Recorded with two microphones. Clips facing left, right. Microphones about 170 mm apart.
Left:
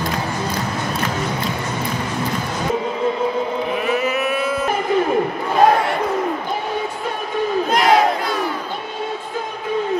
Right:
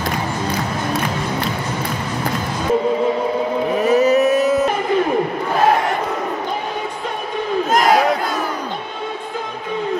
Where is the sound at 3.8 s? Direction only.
40° right (ahead or behind).